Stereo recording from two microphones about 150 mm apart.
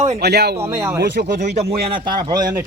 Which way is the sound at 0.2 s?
90° right.